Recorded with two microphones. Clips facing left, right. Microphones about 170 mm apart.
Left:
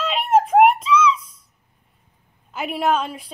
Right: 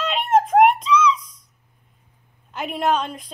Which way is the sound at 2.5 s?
5° left (ahead or behind).